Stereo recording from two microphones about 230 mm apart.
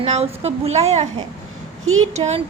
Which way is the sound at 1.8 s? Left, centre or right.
Right.